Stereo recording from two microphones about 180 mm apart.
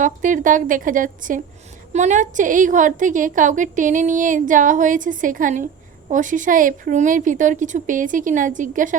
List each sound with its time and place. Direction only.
0.0 s a woman's voice: 45° right (ahead or behind)